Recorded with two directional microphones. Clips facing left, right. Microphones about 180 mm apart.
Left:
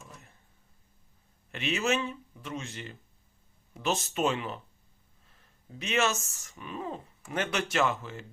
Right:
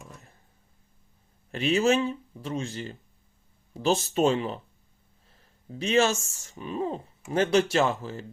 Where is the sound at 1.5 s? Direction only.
35° right (ahead or behind).